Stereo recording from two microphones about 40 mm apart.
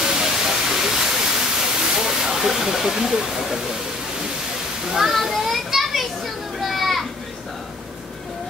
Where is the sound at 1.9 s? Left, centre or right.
Centre.